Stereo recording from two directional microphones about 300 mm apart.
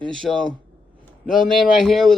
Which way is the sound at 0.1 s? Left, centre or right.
Centre.